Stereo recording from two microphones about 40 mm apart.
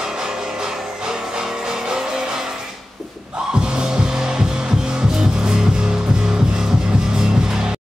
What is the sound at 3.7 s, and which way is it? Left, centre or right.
Music, centre.